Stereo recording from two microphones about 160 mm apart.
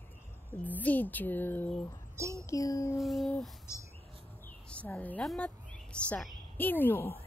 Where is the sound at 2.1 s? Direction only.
20° right (ahead or behind).